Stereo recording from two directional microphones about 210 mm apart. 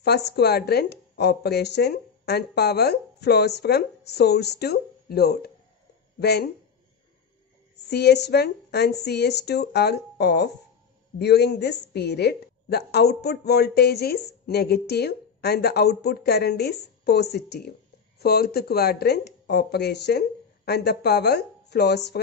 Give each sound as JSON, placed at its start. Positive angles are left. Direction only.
{"t": 0.0, "sound": "a woman's voice", "side_deg": 50}
{"t": 7.9, "sound": "a woman's voice", "side_deg": 50}